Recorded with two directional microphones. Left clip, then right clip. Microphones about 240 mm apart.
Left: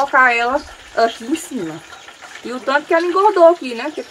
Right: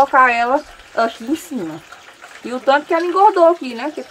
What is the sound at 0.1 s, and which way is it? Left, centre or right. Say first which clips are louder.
Speech: even; right.